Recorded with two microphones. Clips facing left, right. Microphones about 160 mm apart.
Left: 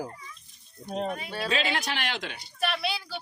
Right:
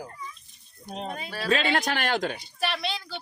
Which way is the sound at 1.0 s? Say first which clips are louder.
Left 2 dB; 30° right (ahead or behind).